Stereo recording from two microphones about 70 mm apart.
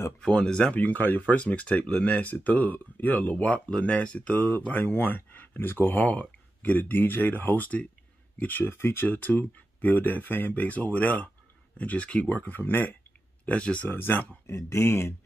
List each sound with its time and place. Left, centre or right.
0.2 s speech: centre
0.7 s speech: left
13.5 s speech: centre
13.8 s speech: left
14.4 s speech: left